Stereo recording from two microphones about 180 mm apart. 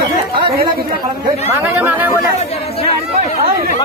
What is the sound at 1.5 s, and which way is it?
Speech, 10° right (ahead or behind).